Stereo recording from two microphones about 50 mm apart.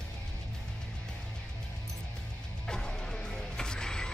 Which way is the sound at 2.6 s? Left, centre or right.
Centre.